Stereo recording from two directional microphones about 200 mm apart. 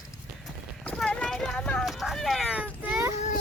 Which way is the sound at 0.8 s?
5° left (ahead or behind).